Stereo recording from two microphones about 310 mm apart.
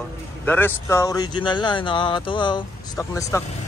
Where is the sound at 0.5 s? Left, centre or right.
Centre.